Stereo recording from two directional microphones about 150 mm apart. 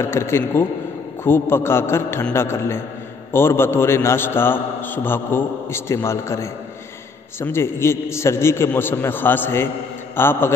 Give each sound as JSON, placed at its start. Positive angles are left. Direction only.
{"t": 0.0, "sound": "a man's voice", "side_deg": 15}